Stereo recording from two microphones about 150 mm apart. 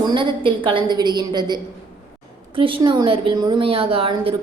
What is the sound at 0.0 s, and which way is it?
A woman's voice, 30° right (ahead or behind).